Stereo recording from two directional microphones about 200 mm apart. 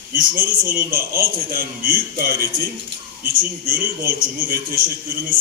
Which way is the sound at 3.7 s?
45° right (ahead or behind).